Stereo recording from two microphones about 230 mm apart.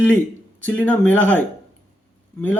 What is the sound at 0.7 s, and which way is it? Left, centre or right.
Speech, centre.